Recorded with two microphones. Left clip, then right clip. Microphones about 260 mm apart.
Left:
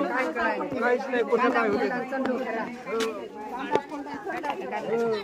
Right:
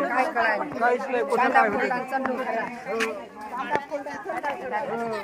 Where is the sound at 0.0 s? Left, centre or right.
Right.